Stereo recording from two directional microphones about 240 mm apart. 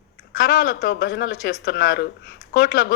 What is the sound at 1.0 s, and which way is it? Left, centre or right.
Speech, left.